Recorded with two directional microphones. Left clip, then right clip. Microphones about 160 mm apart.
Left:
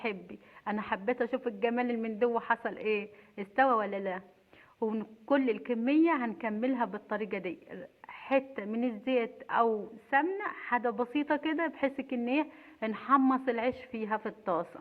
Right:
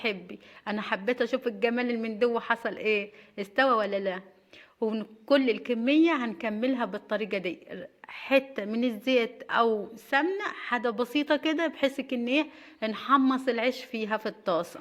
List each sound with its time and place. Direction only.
0.0 s a woman's voice: 35° right (ahead or behind)